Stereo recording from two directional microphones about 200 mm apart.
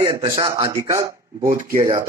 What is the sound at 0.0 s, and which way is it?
A man's voice, 20° right (ahead or behind).